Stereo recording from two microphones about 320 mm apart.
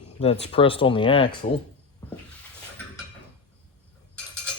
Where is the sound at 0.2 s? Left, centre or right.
Centre.